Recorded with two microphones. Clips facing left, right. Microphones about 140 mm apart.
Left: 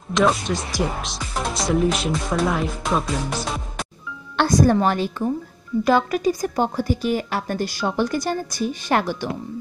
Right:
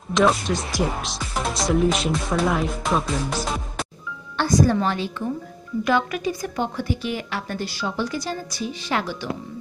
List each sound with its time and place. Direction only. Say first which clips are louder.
0.1 s speech: even; centre (ahead or behind)
4.4 s a woman's voice: left 2 dB; 55° left (ahead or behind)